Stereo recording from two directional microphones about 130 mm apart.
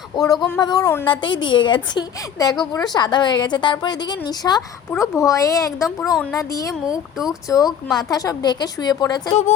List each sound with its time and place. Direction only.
0.2 s speech: 25° left (ahead or behind)
1.0 s a woman's voice: 35° left (ahead or behind)